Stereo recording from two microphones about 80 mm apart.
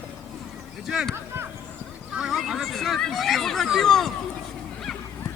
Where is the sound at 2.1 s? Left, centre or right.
Centre.